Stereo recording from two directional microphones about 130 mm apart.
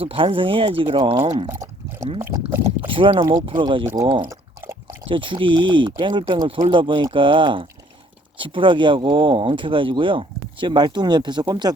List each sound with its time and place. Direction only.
0.0 s speech: 45° right (ahead or behind)
2.8 s speech: 40° right (ahead or behind)
3.8 s speech: 30° right (ahead or behind)
4.6 s a sound: 20° right (ahead or behind)
5.0 s speech: 40° right (ahead or behind)